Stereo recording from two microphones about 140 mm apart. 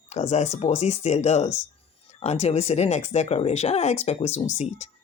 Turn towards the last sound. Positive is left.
turn(degrees=55)  # may be behind; listen again after turning